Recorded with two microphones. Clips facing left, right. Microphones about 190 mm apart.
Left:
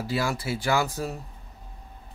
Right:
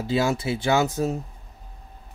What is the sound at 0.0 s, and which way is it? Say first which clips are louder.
Speech: right 5 dB; 20° right (ahead or behind).